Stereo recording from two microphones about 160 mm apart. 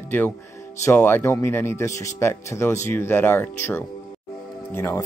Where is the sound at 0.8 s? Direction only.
15° left (ahead or behind).